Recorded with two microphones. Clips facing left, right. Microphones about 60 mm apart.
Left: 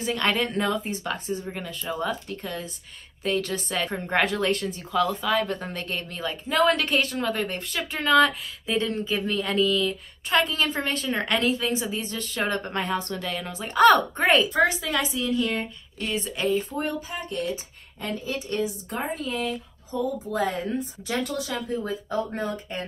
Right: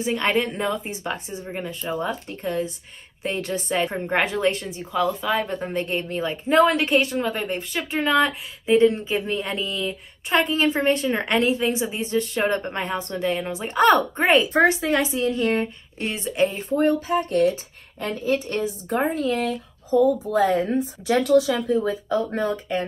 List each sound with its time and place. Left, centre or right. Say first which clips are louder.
0.0 s speech: right 3 dB; centre
1.0 s a woman's voice: even; right
3.9 s speech: right 1 dB; centre
6.6 s speech: right 2 dB; centre
8.6 s a woman's voice: right 9 dB; right
14.1 s speech: right 2 dB; centre
14.5 s speech: right 4 dB; right
16.5 s speech: right 6 dB; right
21.1 s speech: right 11 dB; right
22.5 s speech: right 7 dB; right